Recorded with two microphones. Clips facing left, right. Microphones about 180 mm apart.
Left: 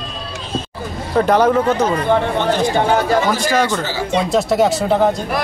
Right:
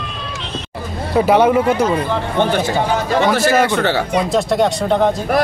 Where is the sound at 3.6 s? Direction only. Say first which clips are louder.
Right 4 dB; 65° right (ahead or behind).